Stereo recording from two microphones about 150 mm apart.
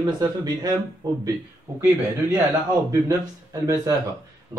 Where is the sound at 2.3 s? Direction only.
20° right (ahead or behind).